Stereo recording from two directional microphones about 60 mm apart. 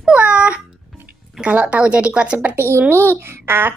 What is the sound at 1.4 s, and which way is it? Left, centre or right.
Speech, centre.